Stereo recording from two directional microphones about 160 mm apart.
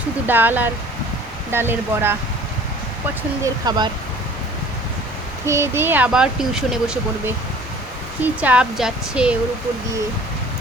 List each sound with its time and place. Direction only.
0.3 s speech: 10° right (ahead or behind)
3.4 s speech: 25° right (ahead or behind)
5.5 s speech: 15° right (ahead or behind)